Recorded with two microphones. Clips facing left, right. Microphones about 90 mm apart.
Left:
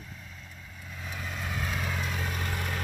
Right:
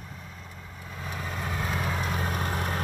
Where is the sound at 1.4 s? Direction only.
25° right (ahead or behind).